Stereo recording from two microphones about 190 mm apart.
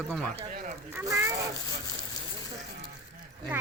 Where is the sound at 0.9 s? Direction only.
15° right (ahead or behind).